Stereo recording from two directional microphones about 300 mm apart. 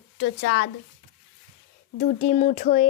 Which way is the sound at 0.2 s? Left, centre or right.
Left.